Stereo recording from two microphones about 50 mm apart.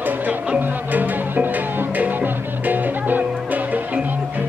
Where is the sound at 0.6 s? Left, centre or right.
Right.